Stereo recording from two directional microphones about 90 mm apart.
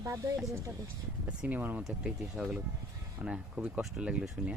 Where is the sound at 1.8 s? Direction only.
5° right (ahead or behind).